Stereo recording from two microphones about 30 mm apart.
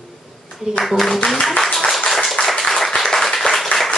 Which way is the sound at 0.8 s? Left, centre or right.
Centre.